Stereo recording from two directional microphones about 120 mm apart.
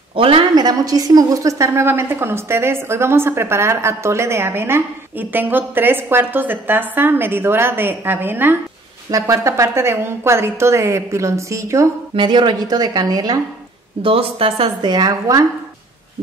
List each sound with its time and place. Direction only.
0.1 s a woman's voice: 50° right (ahead or behind); by 11.9 s 25° right (ahead or behind)
12.2 s a woman's voice: 40° right (ahead or behind)
14.0 s speech: 50° right (ahead or behind)
14.9 s a woman's voice: 35° right (ahead or behind)